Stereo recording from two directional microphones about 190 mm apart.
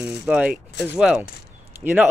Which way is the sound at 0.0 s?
5° right (ahead or behind).